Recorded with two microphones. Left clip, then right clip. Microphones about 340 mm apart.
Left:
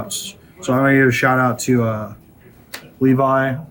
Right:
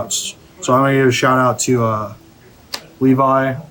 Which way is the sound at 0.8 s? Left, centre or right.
Right.